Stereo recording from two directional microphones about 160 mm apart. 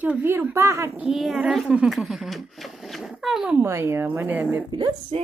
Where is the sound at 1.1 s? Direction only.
Centre (ahead or behind).